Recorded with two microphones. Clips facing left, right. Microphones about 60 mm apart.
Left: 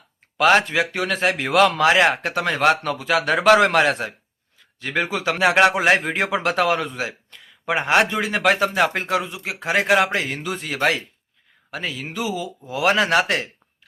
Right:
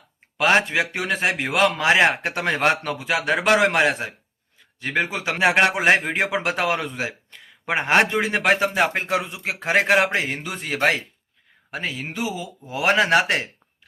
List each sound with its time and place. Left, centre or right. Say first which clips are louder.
0.3 s speech: left 2 dB; centre
6.9 s a sound: even; right
7.7 s a man's voice: even; right